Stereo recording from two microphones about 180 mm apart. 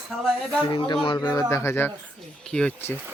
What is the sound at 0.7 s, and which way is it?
Speech, 25° left (ahead or behind).